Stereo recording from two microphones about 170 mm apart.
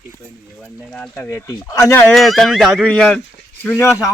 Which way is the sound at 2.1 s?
Centre (ahead or behind).